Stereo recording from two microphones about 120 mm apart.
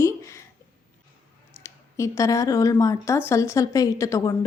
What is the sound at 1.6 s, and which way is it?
A woman's voice, 25° left (ahead or behind).